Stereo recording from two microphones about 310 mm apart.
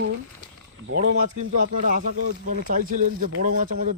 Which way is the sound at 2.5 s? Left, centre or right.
Right.